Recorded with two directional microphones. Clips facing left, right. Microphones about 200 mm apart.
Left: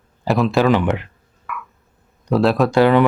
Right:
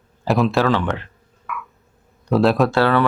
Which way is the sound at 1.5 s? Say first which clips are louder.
Even; centre (ahead or behind).